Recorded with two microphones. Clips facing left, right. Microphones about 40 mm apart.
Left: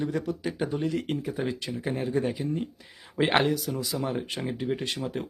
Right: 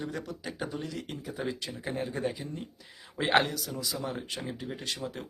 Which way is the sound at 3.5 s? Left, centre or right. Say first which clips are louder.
Left 6 dB; centre.